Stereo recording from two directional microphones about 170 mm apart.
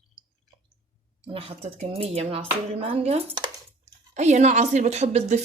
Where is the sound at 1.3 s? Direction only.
35° right (ahead or behind).